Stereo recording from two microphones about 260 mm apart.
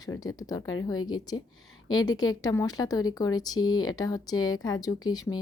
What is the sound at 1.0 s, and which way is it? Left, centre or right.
Speech, left.